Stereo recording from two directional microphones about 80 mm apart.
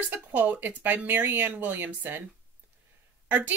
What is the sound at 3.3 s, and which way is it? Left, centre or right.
Speech, right.